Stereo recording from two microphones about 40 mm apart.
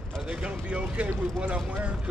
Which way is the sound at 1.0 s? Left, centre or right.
Right.